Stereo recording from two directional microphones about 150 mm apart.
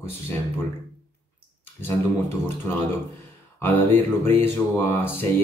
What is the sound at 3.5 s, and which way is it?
Speech, 15° left (ahead or behind).